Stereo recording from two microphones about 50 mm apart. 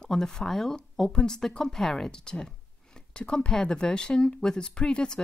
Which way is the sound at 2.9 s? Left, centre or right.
Centre.